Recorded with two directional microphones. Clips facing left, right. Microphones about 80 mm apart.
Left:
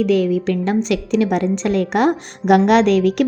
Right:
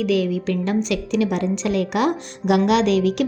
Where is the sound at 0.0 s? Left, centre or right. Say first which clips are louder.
Left 4 dB; left.